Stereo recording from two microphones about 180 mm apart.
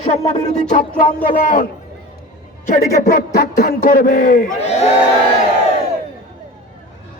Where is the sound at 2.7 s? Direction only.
55° left (ahead or behind).